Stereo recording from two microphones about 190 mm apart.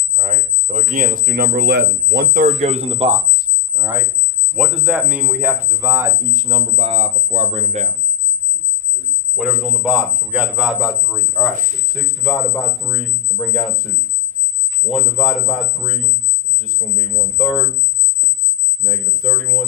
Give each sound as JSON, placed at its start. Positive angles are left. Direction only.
{"t": 0.1, "sound": "speech", "side_deg": -40}
{"t": 2.6, "sound": "speech", "side_deg": -30}
{"t": 4.5, "sound": "speech", "side_deg": -5}
{"t": 9.3, "sound": "speech", "side_deg": -5}
{"t": 14.8, "sound": "speech", "side_deg": 0}
{"t": 17.3, "sound": "speech", "side_deg": 0}
{"t": 18.9, "sound": "speech", "side_deg": 5}